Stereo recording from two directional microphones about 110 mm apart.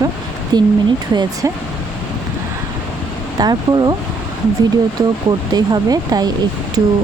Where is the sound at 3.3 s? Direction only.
40° right (ahead or behind).